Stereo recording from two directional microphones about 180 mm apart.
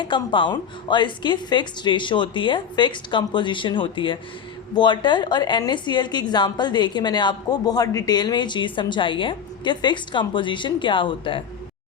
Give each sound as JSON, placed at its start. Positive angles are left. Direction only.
{"t": 0.0, "sound": "a woman's voice", "side_deg": 25}